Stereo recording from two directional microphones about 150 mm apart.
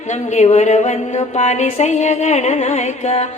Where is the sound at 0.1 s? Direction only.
50° left (ahead or behind).